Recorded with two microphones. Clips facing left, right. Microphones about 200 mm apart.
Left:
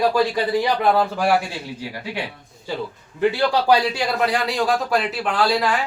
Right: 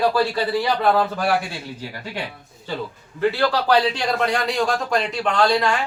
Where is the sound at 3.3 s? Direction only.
15° left (ahead or behind).